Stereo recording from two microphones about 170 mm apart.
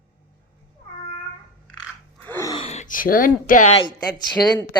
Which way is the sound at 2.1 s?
10° left (ahead or behind).